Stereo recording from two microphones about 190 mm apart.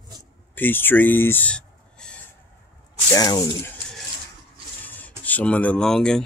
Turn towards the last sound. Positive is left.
turn(degrees=5)  # may be behind; listen again after turning